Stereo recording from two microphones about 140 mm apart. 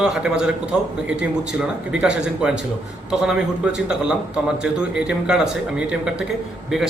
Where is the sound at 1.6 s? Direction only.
5° right (ahead or behind).